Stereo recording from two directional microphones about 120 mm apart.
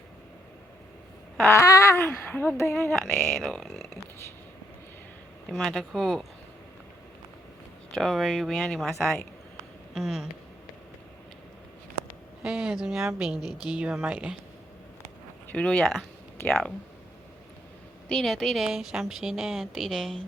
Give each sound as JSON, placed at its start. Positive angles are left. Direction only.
{"t": 1.4, "sound": "a sound", "side_deg": 20}
{"t": 2.0, "sound": "speech", "side_deg": 15}
{"t": 3.3, "sound": "speech", "side_deg": 0}
{"t": 5.5, "sound": "a woman's voice", "side_deg": 0}
{"t": 7.9, "sound": "a woman's voice", "side_deg": 0}
{"t": 12.4, "sound": "a woman's voice", "side_deg": -5}
{"t": 15.4, "sound": "speech", "side_deg": 10}
{"t": 18.1, "sound": "a woman's voice", "side_deg": 5}